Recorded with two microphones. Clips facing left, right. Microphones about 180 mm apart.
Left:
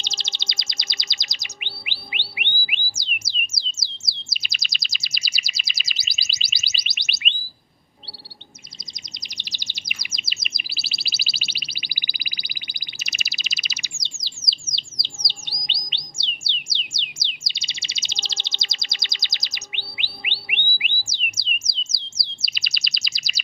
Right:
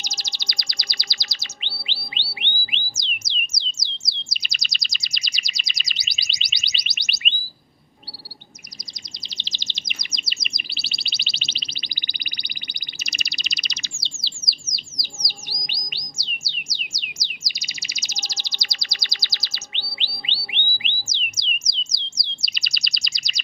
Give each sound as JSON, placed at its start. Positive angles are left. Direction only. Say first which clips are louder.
{"t": 0.0, "sound": "chirp", "louder": "even", "side_deg": 25}
{"t": 2.3, "sound": "music", "louder": "left 1 dB", "side_deg": 10}
{"t": 3.6, "sound": "bird", "louder": "right 1 dB", "side_deg": 5}
{"t": 9.2, "sound": "chirp", "louder": "right 3 dB", "side_deg": 15}
{"t": 14.0, "sound": "bird", "louder": "right 2 dB", "side_deg": 20}
{"t": 20.0, "sound": "whistle", "louder": "even", "side_deg": 15}
{"t": 20.7, "sound": "music", "louder": "even", "side_deg": 10}
{"t": 21.9, "sound": "bird", "louder": "right 2 dB", "side_deg": 5}